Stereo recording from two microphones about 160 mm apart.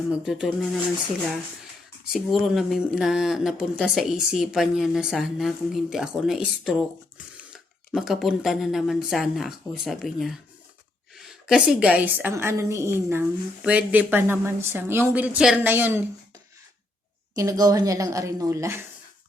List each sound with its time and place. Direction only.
0.1 s speech: 5° right (ahead or behind)
2.1 s a woman's voice: centre (ahead or behind)
17.3 s a woman's voice: 20° right (ahead or behind)